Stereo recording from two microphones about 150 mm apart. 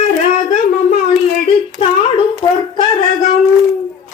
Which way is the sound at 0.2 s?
50° left (ahead or behind).